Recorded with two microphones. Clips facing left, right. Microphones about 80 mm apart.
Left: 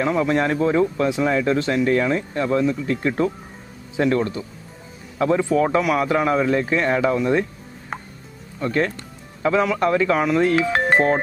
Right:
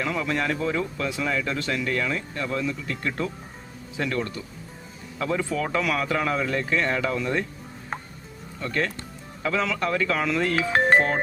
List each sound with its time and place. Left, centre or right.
0.0 s speech: left
8.6 s speech: left
10.7 s music: centre
10.9 s music: left